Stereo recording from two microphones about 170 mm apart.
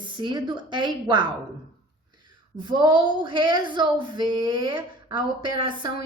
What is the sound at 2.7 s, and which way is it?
Speech, 25° right (ahead or behind).